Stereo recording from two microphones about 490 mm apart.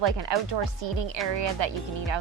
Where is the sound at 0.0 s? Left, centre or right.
Right.